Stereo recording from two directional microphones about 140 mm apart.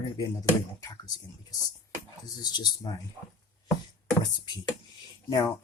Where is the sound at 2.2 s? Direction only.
30° left (ahead or behind).